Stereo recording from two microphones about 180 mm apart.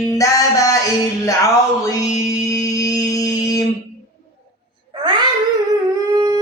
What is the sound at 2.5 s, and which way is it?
Music, 20° left (ahead or behind).